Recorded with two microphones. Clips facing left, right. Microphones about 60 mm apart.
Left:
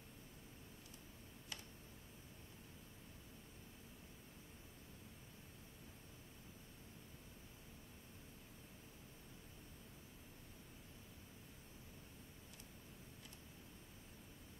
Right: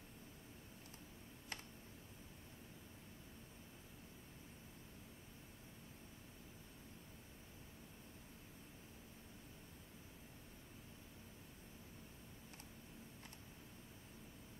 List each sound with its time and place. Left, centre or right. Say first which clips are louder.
1.5 s tick: right 3 dB; right